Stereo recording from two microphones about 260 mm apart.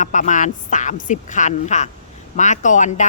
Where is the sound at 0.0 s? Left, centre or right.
Left.